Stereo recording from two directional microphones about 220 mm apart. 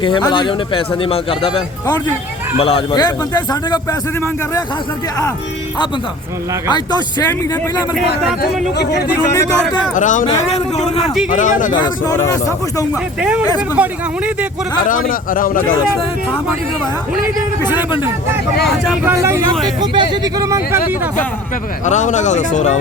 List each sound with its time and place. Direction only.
0.0 s a man's voice: 20° left (ahead or behind)
6.7 s a man's voice: 20° left (ahead or behind)
7.9 s speech: centre (ahead or behind)
8.4 s speech: 50° left (ahead or behind)
9.9 s a man's voice: 35° left (ahead or behind)
11.8 s a man's voice: 15° left (ahead or behind)
12.9 s speech: 5° right (ahead or behind)
14.8 s speech: 40° left (ahead or behind)
17.6 s speech: 10° right (ahead or behind)
19.1 s speech: 15° right (ahead or behind)
21.8 s speech: 35° left (ahead or behind)